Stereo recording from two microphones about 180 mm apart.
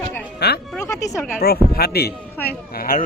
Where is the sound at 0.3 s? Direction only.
65° left (ahead or behind).